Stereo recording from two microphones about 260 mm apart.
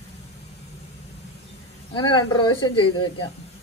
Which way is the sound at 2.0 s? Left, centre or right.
Centre.